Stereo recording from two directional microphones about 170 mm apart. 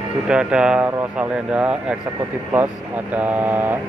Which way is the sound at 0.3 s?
5° right (ahead or behind).